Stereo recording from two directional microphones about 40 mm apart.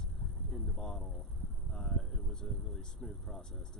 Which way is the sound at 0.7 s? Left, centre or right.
Centre.